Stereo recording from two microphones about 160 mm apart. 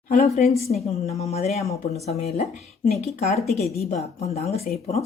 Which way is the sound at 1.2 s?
45° left (ahead or behind).